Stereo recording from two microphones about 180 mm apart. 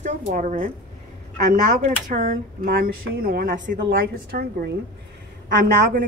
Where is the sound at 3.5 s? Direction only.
65° right (ahead or behind).